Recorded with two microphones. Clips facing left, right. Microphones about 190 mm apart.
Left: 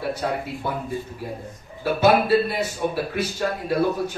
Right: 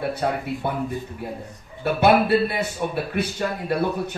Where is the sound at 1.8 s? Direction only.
60° right (ahead or behind).